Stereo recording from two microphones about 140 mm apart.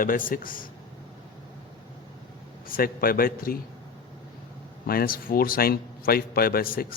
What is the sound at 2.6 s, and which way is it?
Speech, 90° left.